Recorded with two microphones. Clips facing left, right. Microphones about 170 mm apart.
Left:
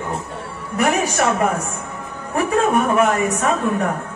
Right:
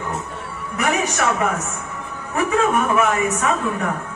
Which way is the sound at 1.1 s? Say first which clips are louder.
Left 2 dB; 35° left (ahead or behind).